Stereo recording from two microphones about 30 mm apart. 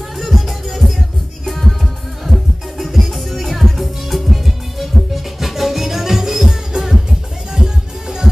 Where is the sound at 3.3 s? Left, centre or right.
Centre.